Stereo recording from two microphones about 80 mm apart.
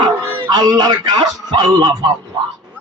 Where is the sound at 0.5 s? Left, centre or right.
Right.